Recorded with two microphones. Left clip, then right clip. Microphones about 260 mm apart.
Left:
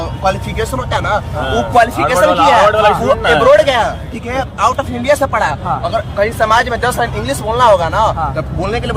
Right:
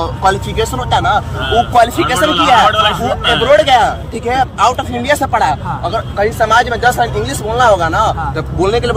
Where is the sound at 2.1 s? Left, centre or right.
Centre.